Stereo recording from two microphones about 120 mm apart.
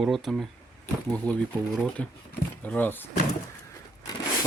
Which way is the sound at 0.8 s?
10° left (ahead or behind).